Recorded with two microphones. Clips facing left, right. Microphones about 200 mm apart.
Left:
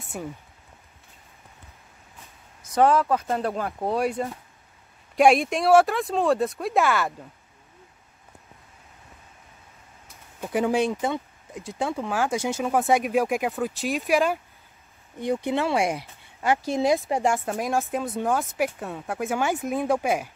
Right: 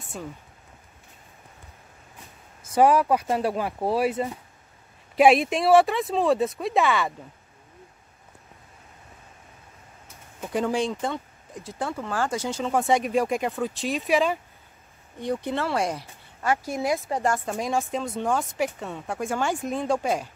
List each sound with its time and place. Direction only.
2.7 s speech: 15° right (ahead or behind)
10.4 s speech: 10° left (ahead or behind)
15.1 s speech: 10° left (ahead or behind)
16.4 s speech: 25° left (ahead or behind)
17.5 s speech: centre (ahead or behind)